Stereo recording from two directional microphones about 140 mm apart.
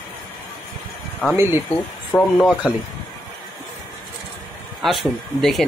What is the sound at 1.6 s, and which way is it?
Speech, 5° left (ahead or behind).